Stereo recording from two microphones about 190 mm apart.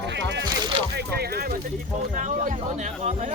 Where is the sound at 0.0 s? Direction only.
70° right (ahead or behind).